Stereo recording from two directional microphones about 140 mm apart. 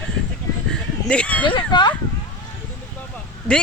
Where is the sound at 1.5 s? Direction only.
35° left (ahead or behind).